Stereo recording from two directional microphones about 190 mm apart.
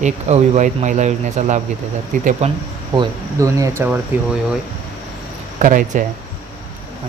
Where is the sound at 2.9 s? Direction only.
15° right (ahead or behind).